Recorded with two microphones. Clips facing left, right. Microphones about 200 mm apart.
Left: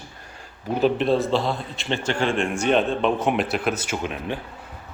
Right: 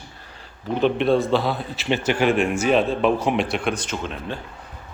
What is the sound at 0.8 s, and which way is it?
A man's voice, centre (ahead or behind).